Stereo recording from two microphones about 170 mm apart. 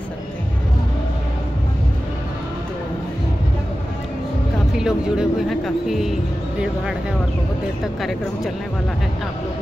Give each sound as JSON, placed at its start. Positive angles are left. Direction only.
{"t": 4.7, "sound": "speech", "side_deg": -5}